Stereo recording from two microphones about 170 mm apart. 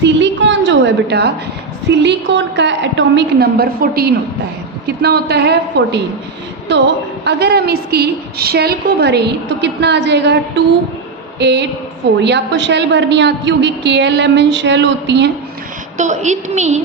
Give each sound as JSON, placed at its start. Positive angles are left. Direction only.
{"t": 0.0, "sound": "a sound", "side_deg": -90}
{"t": 1.9, "sound": "a woman's voice", "side_deg": -90}
{"t": 5.0, "sound": "a woman's voice", "side_deg": -75}
{"t": 6.7, "sound": "a woman's voice", "side_deg": -90}
{"t": 11.3, "sound": "a woman's voice", "side_deg": -90}
{"t": 16.0, "sound": "a woman's voice", "side_deg": -45}